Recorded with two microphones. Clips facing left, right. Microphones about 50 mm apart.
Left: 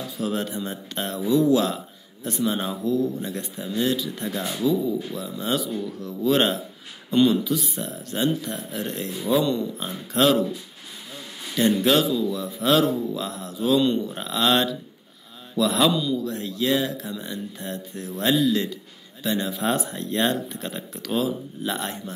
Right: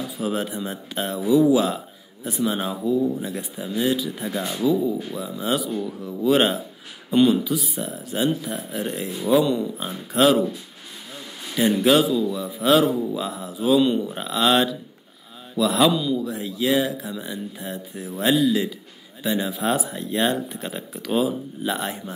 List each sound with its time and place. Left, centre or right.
0.2 s speech: centre
4.4 s speech: right
5.1 s speech: centre
11.5 s speech: centre